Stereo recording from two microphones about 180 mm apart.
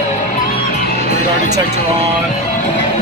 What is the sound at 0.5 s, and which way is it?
Music, 55° left (ahead or behind).